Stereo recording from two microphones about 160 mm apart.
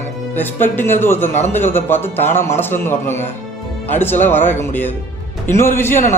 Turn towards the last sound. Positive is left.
turn(degrees=15)  # may be behind; listen again after turning